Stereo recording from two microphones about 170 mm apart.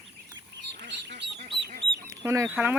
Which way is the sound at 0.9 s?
90° right.